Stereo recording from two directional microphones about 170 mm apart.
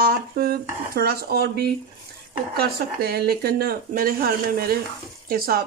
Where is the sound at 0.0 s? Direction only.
65° right (ahead or behind).